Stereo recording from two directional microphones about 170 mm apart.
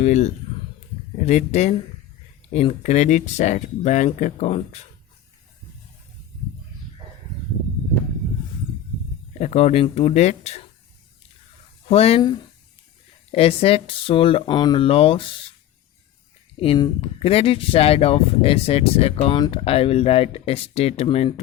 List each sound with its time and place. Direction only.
0.0 s speech: 40° left (ahead or behind)
9.4 s speech: 40° left (ahead or behind)
11.9 s speech: 35° left (ahead or behind)
13.3 s speech: 35° left (ahead or behind)
16.6 s speech: 30° left (ahead or behind)